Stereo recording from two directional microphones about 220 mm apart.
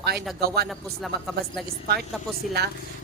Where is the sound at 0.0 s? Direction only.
45° right (ahead or behind).